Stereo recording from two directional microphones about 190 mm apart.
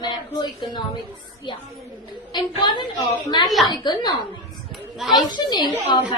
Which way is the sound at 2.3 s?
20° left (ahead or behind).